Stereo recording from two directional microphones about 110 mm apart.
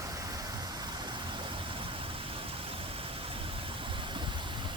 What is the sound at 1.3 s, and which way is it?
Vehicle, 50° right (ahead or behind).